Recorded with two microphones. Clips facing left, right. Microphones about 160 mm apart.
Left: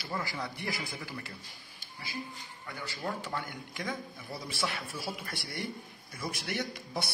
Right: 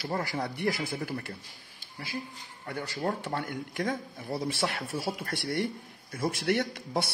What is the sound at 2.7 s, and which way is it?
Speech, 45° right (ahead or behind).